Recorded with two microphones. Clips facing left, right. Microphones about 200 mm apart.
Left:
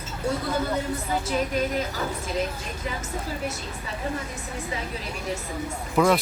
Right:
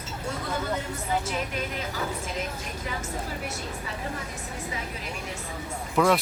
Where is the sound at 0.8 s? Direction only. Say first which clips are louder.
Left 2 dB; 35° left (ahead or behind).